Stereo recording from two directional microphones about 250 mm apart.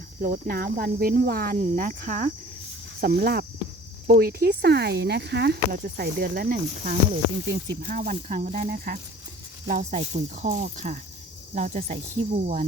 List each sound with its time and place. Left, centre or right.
0.2 s speech: right